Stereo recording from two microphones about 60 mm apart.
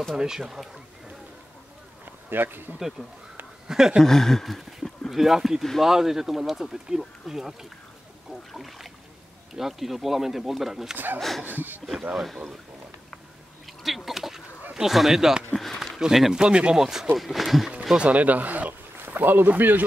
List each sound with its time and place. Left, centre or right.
0.1 s speech: centre
2.0 s a sound: right
3.6 s speech: centre
4.0 s speech: centre
11.4 s speech: right
12.2 s speech: centre
13.8 s a sound: centre
14.7 s speech: centre
17.9 s speech: right